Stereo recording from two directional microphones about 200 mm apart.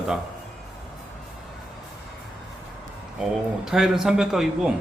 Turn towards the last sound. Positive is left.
turn(degrees=0)  # may be behind; listen again after turning